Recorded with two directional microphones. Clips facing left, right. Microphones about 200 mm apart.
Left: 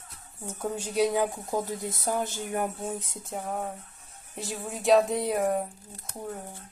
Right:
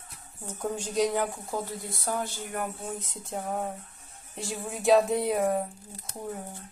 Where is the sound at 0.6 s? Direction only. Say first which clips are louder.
Left 1 dB; 10° left (ahead or behind).